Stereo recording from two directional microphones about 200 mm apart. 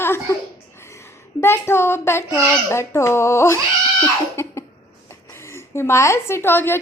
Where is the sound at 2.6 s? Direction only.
15° left (ahead or behind).